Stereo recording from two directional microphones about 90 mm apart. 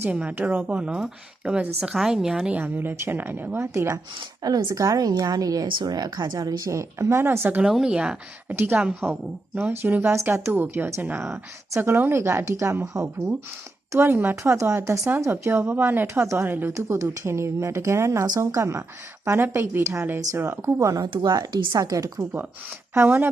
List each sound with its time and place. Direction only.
0.1 s a woman's voice: 15° right (ahead or behind); by 4.0 s 30° right (ahead or behind)
4.4 s a woman's voice: 45° right (ahead or behind); by 7.6 s 25° right (ahead or behind)
7.6 s a woman's voice: 5° right (ahead or behind)
8.5 s a woman's voice: 25° right (ahead or behind); by 13.1 s 40° right (ahead or behind)
13.9 s a woman's voice: 25° right (ahead or behind)
16.7 s a woman's voice: 35° right (ahead or behind)
21.1 s a woman's voice: 50° right (ahead or behind)
23.0 s a woman's voice: 20° right (ahead or behind)